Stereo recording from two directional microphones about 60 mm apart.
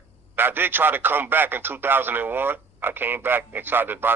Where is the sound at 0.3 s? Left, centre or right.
Right.